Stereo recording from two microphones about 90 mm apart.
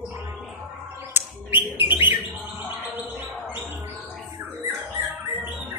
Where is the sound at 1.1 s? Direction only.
20° right (ahead or behind).